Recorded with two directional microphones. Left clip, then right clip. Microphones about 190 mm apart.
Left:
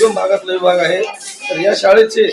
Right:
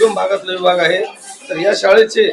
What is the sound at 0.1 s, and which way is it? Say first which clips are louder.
A man's voice: left 2 dB; 15° left (ahead or behind).